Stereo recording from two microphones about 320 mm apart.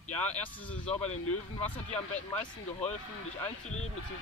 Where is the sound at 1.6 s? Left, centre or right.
Left.